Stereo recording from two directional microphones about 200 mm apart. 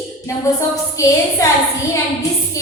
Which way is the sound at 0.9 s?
15° left (ahead or behind).